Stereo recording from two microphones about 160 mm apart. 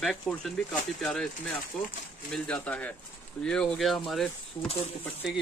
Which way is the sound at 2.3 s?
5° left (ahead or behind).